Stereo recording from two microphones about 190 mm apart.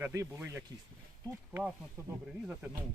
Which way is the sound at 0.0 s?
15° right (ahead or behind).